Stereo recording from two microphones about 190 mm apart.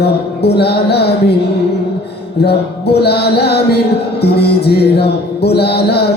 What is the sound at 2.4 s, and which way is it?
Music, 60° left (ahead or behind).